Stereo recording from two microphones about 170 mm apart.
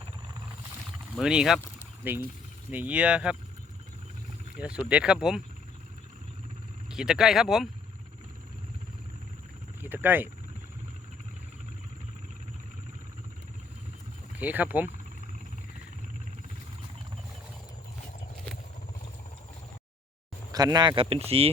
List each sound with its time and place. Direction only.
1.1 s speech: 5° right (ahead or behind)
4.5 s speech: 5° right (ahead or behind)
6.9 s speech: 5° right (ahead or behind)
9.8 s speech: 10° right (ahead or behind)
14.3 s speech: 10° right (ahead or behind)
20.5 s speech: 20° right (ahead or behind)